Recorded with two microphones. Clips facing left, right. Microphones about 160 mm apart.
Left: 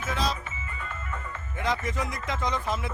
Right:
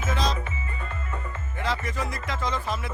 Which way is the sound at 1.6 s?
20° left (ahead or behind).